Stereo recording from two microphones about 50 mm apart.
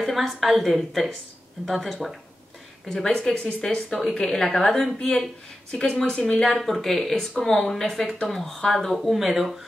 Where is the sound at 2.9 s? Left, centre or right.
Centre.